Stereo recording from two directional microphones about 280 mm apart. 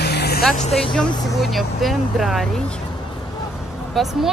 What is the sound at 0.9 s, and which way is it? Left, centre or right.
Speech, centre.